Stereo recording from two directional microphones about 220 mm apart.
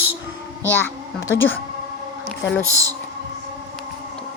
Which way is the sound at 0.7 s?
10° left (ahead or behind).